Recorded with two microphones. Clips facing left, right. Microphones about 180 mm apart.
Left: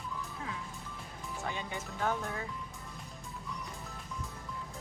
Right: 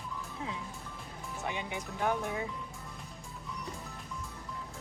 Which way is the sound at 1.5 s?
15° right (ahead or behind).